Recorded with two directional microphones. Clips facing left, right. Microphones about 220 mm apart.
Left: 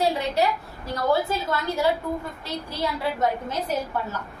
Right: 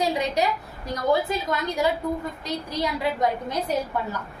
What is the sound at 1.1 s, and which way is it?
A woman's voice, 15° right (ahead or behind).